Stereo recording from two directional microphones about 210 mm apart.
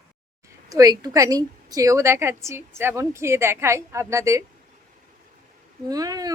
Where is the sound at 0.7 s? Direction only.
15° right (ahead or behind).